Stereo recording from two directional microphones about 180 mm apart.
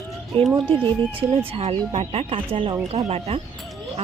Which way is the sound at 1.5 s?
35° right (ahead or behind).